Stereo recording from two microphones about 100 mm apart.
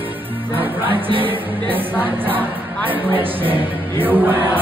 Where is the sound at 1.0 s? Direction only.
60° right (ahead or behind).